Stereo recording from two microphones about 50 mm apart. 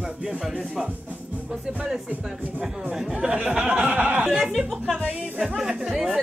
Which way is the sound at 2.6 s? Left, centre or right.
Right.